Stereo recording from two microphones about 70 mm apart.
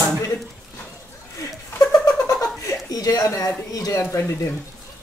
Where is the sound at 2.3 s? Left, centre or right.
Left.